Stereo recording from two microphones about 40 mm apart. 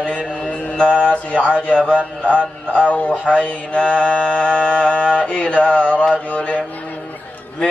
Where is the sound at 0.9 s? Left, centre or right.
Left.